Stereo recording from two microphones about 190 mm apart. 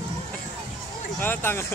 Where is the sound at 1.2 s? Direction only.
10° left (ahead or behind).